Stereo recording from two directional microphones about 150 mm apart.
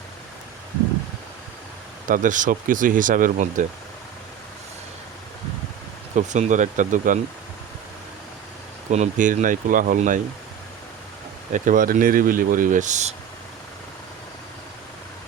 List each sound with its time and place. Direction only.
2.0 s speech: 60° right (ahead or behind)
6.1 s speech: 50° right (ahead or behind)
8.9 s speech: 55° right (ahead or behind)
11.5 s speech: 60° right (ahead or behind)